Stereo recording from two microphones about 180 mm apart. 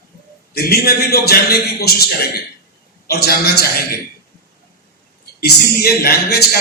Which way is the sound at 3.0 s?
60° left (ahead or behind).